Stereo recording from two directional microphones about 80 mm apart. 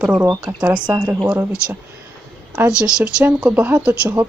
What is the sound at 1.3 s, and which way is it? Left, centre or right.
Speech, centre.